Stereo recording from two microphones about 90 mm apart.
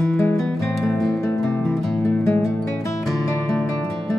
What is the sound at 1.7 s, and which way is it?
Music, 35° left (ahead or behind).